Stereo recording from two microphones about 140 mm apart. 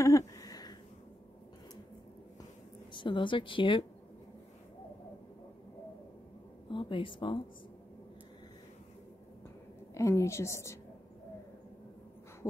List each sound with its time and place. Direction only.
0.0 s a sound: 25° left (ahead or behind)
2.9 s speech: 35° left (ahead or behind)
6.7 s speech: 35° left (ahead or behind)
9.9 s a woman's voice: 20° left (ahead or behind)